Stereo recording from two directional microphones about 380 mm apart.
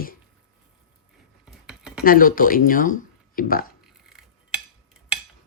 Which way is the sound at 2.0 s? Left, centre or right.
Left.